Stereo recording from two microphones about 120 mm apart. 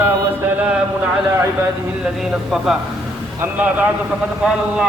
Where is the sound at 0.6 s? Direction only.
15° right (ahead or behind).